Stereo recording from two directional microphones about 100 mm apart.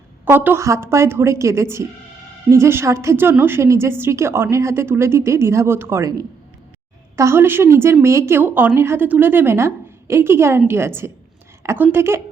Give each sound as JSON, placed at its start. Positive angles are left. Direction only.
{"t": 0.3, "sound": "a woman's voice", "side_deg": -20}
{"t": 7.2, "sound": "a woman's voice", "side_deg": -25}